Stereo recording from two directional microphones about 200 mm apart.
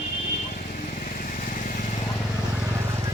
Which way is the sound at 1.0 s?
45° left (ahead or behind).